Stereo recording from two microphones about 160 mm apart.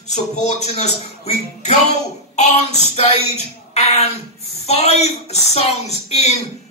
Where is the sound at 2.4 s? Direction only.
45° left (ahead or behind).